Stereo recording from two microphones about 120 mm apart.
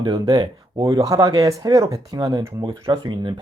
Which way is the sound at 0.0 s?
35° right (ahead or behind).